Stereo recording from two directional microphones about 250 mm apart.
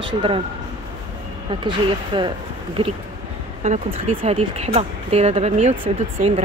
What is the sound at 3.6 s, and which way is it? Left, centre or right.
Speech, right.